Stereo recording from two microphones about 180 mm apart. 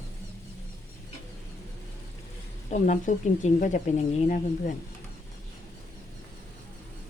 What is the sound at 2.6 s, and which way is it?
Speech, 45° left (ahead or behind).